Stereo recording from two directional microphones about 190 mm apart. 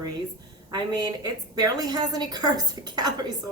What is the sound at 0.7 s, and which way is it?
A woman's voice, 20° right (ahead or behind).